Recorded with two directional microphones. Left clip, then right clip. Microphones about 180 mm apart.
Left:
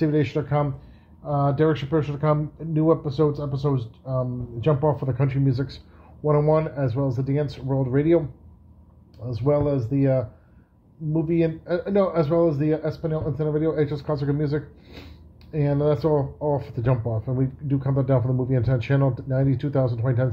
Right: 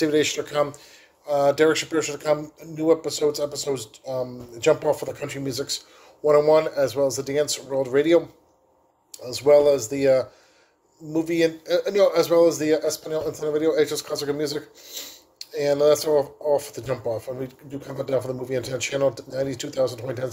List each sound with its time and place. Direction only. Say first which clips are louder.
0.0 s a man's voice: right 2 dB; 20° right (ahead or behind)
9.2 s a man's voice: right 7 dB; 25° right (ahead or behind)